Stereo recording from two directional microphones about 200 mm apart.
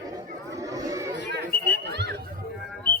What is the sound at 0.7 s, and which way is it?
Chatter, 15° right (ahead or behind).